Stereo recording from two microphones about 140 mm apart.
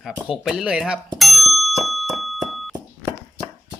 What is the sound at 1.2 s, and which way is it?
Ding, centre (ahead or behind).